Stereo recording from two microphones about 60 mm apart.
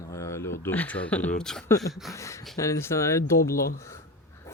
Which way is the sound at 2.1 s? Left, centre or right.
Left.